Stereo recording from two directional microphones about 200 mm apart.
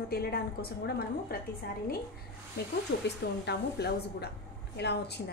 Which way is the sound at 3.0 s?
55° left (ahead or behind).